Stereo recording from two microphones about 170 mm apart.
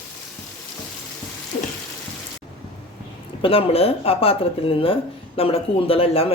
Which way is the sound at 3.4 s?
35° left (ahead or behind).